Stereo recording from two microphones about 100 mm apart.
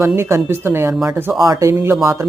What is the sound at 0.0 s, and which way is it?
Speech, 25° right (ahead or behind).